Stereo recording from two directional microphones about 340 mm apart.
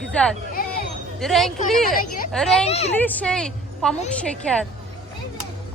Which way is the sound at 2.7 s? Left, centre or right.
Centre.